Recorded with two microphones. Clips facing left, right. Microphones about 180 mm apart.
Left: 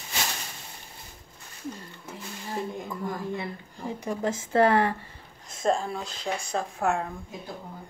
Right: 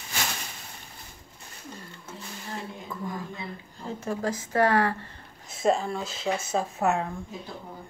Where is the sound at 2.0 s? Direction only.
15° left (ahead or behind).